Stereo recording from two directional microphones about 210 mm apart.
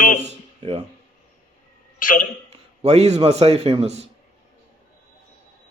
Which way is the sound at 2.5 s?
30° right (ahead or behind).